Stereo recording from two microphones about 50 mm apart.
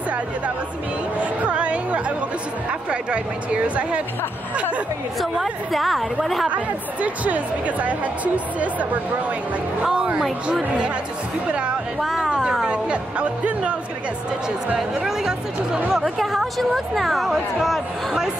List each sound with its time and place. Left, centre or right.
1.4 s chatter: right
2.9 s speech: right
5.3 s speech: centre
6.5 s speech: right
9.9 s speech: centre
12.0 s speech: centre
12.3 s a sound: centre
12.6 s speech: right
14.8 s speech: centre